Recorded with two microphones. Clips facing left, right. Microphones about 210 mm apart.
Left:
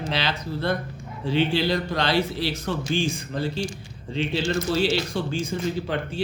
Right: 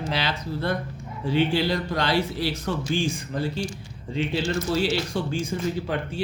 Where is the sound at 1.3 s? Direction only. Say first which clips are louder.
Even; 25° left (ahead or behind).